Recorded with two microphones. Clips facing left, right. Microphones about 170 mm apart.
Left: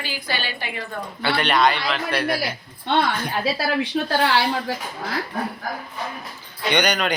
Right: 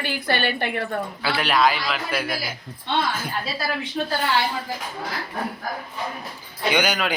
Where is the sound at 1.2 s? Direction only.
5° right (ahead or behind).